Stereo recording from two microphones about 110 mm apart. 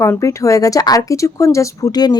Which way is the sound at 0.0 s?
25° left (ahead or behind).